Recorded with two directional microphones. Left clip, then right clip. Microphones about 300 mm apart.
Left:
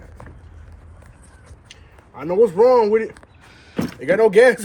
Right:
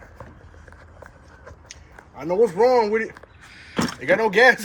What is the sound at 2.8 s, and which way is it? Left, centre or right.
Speech, left.